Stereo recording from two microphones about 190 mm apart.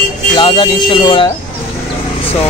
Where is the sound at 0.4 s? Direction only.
25° left (ahead or behind).